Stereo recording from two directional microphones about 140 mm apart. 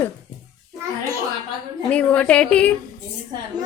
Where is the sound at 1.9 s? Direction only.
10° left (ahead or behind).